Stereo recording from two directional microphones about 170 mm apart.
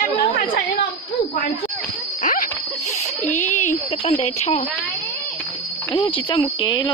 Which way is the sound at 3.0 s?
45° left (ahead or behind).